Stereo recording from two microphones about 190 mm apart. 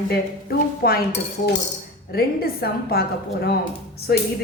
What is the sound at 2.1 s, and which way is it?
Speech, 55° left (ahead or behind).